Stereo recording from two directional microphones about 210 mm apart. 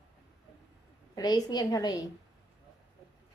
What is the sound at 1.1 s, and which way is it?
Speech, 20° left (ahead or behind).